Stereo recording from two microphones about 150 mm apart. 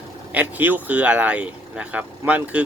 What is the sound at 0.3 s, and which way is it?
Speech, 10° right (ahead or behind).